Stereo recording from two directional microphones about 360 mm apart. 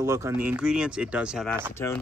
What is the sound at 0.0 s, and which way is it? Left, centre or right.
Speech, centre.